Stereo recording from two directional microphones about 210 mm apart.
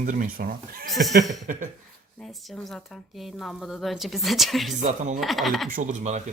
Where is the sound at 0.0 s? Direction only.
40° right (ahead or behind).